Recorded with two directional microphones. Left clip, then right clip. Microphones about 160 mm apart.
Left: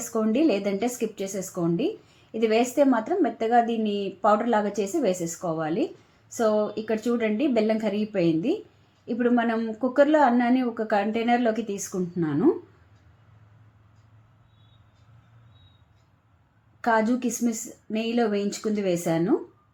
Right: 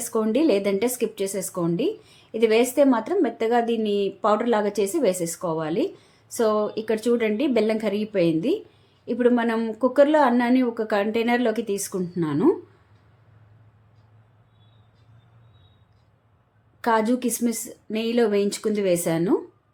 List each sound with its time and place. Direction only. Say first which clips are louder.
0.1 s a woman's voice: right 3 dB; 20° right (ahead or behind)
16.8 s a woman's voice: right 2 dB; 20° right (ahead or behind)